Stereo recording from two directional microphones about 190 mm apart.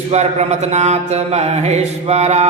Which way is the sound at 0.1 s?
35° right (ahead or behind).